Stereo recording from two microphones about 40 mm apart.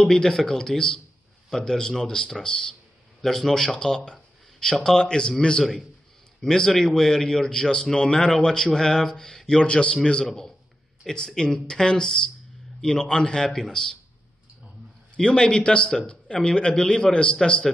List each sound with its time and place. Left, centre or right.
0.0 s a man's voice: centre
3.7 s speech: left
5.0 s a man's voice: left
5.6 s a man's voice: centre
9.6 s a man's voice: left
15.1 s a man's voice: left